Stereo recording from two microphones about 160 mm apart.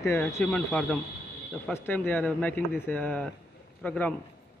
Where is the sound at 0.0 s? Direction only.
15° left (ahead or behind).